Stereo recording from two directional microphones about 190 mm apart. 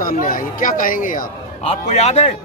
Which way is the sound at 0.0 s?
45° left (ahead or behind).